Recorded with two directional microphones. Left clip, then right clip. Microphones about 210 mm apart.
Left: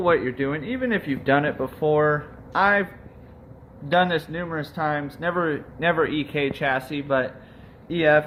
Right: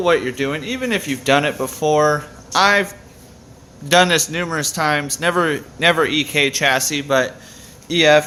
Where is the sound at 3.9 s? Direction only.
40° right (ahead or behind).